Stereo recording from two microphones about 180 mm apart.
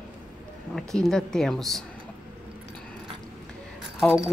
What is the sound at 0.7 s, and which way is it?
Speech, centre (ahead or behind).